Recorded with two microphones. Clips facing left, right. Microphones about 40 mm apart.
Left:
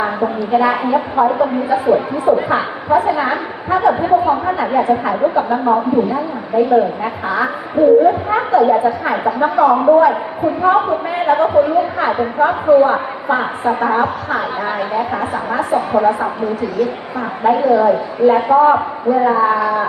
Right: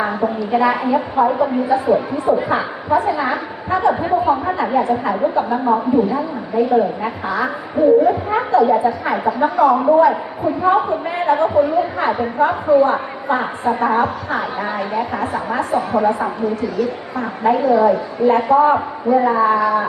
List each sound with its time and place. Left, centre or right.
0.0 s a woman's voice: centre